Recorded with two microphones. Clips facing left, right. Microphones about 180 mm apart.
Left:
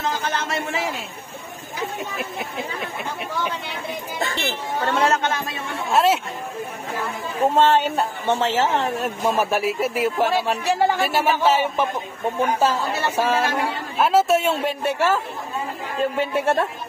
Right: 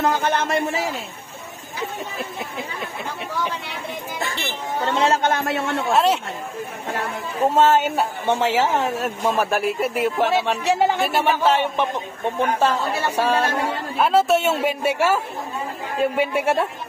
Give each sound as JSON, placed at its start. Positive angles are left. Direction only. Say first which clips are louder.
{"t": 0.0, "sound": "speech", "louder": "right 5 dB", "side_deg": -55}
{"t": 4.7, "sound": "speech", "louder": "right 1 dB", "side_deg": -15}
{"t": 5.2, "sound": "a man's voice", "louder": "right 5 dB", "side_deg": -60}
{"t": 5.9, "sound": "a woman's voice", "louder": "left 1 dB", "side_deg": 0}
{"t": 7.4, "sound": "a woman's voice", "louder": "right 1 dB", "side_deg": 0}
{"t": 13.1, "sound": "a woman's voice", "louder": "right 1 dB", "side_deg": 0}